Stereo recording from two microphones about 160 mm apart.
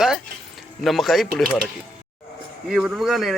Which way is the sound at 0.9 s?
Centre (ahead or behind).